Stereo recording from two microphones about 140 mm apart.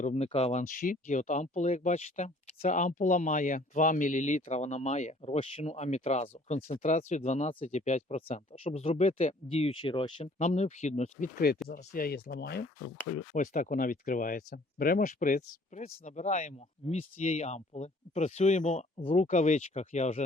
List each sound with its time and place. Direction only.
0.0 s speech: 55° left (ahead or behind)
2.6 s speech: 60° left (ahead or behind); by 10.2 s 35° left (ahead or behind)
10.3 s speech: 55° left (ahead or behind)
11.9 s speech: 90° left
13.3 s speech: 65° left (ahead or behind)